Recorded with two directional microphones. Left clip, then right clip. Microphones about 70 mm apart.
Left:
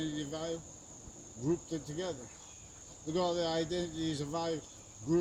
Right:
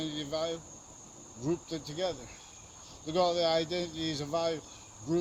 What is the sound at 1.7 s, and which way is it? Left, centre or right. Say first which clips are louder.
Speech: right 2 dB; left.